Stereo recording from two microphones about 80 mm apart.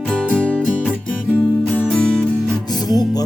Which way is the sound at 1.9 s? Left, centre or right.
Centre.